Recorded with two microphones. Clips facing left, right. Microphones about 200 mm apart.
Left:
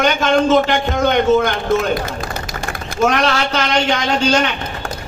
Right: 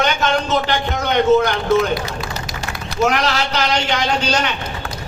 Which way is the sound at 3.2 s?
25° left (ahead or behind).